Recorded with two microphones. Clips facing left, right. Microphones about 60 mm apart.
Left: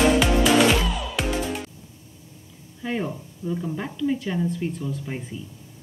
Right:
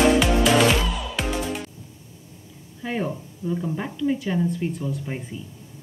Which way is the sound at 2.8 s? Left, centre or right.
Centre.